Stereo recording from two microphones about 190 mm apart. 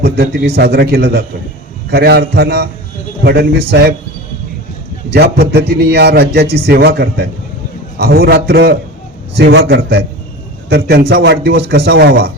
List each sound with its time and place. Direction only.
0.0 s a man's voice: 60° right (ahead or behind)
5.1 s a man's voice: 60° right (ahead or behind)